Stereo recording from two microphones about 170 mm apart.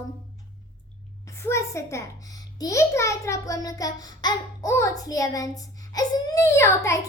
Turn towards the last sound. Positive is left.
turn(degrees=15)  # may be behind; listen again after turning